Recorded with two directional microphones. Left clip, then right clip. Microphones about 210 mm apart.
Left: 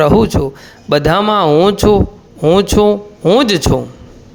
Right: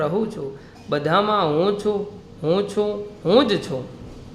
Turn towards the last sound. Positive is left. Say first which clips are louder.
# left 7 dB
turn(degrees=40)  # may be behind; listen again after turning